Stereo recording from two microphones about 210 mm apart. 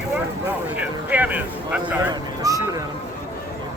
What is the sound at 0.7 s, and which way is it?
Speech, 5° right (ahead or behind).